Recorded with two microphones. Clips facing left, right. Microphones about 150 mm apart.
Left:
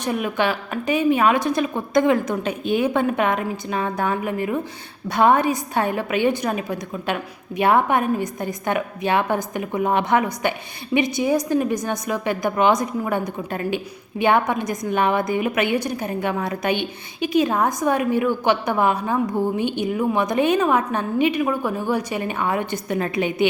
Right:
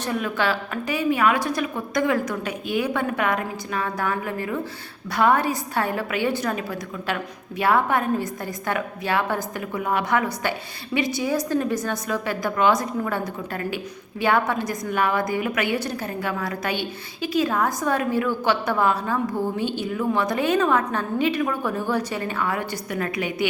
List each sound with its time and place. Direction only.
0.0 s a woman's voice: 15° left (ahead or behind)